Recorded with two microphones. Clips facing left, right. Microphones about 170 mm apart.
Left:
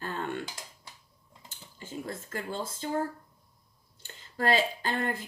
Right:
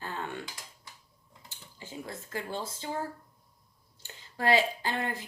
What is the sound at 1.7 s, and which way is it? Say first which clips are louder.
Speech: left 3 dB; 50° left (ahead or behind).